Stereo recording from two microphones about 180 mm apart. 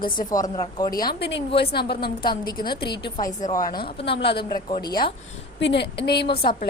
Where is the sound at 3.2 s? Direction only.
50° left (ahead or behind).